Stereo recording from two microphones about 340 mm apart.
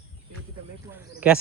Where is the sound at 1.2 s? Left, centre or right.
Centre.